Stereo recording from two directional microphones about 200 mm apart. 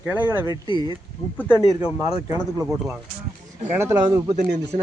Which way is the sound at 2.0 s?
15° right (ahead or behind).